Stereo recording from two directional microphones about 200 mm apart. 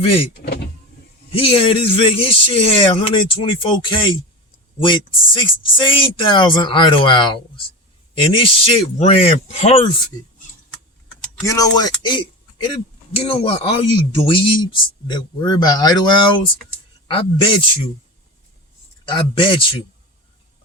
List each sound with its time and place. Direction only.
0.0 s speech: 30° left (ahead or behind)
1.3 s speech: 25° left (ahead or behind)
11.4 s a man's voice: 15° left (ahead or behind)
19.0 s speech: 25° left (ahead or behind)